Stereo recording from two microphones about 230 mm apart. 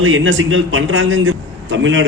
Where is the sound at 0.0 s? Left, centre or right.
Right.